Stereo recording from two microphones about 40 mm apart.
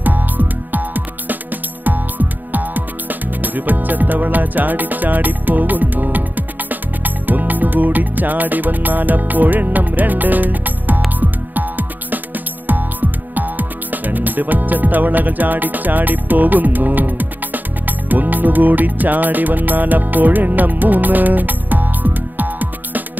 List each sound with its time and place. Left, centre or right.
0.0 s music: right
13.3 s music: right